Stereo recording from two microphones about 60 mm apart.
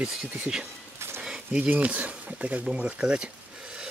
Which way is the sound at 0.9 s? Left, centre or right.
Right.